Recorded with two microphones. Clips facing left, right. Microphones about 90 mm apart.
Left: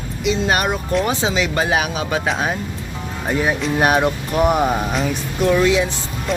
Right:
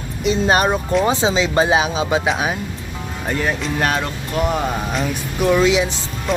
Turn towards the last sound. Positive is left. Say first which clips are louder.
# right 2 dB
turn(degrees=0)  # may be behind; listen again after turning